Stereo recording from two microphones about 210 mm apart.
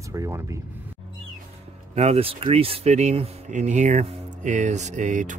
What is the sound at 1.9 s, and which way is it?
Speech, 30° right (ahead or behind).